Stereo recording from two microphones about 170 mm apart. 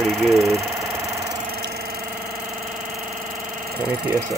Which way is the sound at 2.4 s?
Centre (ahead or behind).